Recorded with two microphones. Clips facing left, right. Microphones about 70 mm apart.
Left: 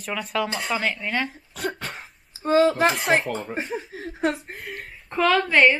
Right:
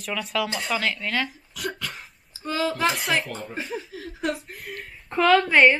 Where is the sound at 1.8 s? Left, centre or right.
Left.